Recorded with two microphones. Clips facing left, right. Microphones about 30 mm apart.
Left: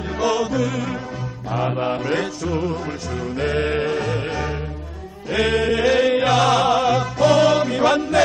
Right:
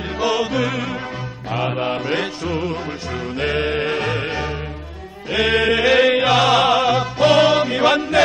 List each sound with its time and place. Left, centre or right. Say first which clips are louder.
0.2 s music: right 1 dB; right
1.5 s mantra: right 1 dB; right
3.3 s music: right 1 dB; right
3.8 s music: right 1 dB; right
5.3 s mantra: right 2 dB; right
5.6 s music: right 4 dB; right